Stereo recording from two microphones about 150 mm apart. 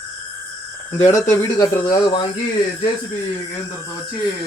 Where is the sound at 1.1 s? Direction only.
25° left (ahead or behind).